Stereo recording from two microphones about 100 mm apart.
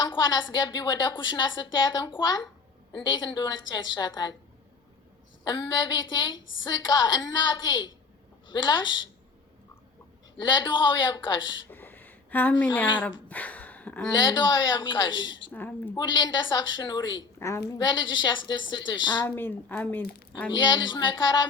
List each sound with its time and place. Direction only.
0.0 s a woman's voice: 45° left (ahead or behind)
5.5 s a woman's voice: 45° left (ahead or behind)
10.4 s a woman's voice: 50° left (ahead or behind)
11.7 s a sound: 20° left (ahead or behind)
13.0 s speech: 15° left (ahead or behind)
14.1 s a woman's voice: 45° left (ahead or behind)
15.5 s speech: 20° left (ahead or behind)
16.0 s a woman's voice: 50° left (ahead or behind)
19.2 s speech: 20° left (ahead or behind)
20.5 s a woman's voice: 50° left (ahead or behind)